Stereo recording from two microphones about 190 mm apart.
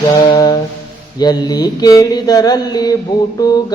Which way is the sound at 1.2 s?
20° left (ahead or behind).